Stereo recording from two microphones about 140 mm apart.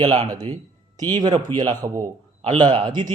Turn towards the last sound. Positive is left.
turn(degrees=-35)  # may be behind; listen again after turning